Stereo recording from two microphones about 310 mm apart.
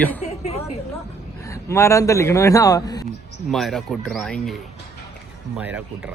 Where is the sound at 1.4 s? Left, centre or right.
Centre.